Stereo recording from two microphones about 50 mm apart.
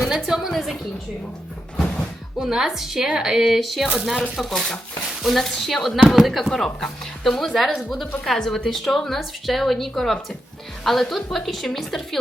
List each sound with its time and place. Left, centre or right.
0.0 s a sound: centre
1.7 s music: centre
2.5 s a woman's voice: centre
3.5 s a woman's voice: centre